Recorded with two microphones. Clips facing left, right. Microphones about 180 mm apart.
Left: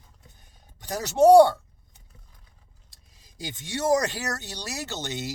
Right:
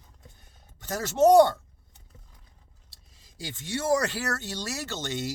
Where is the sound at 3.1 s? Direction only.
15° left (ahead or behind).